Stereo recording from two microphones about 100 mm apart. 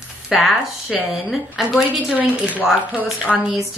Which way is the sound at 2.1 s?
15° right (ahead or behind).